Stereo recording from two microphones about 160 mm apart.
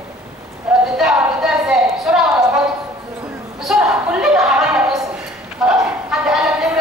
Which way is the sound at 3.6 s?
5° right (ahead or behind).